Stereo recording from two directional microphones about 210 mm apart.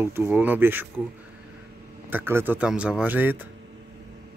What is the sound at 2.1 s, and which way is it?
Speech, 10° right (ahead or behind).